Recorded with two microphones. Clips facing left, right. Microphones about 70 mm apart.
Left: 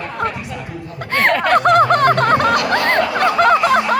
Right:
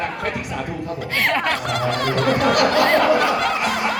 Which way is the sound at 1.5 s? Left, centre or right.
Left.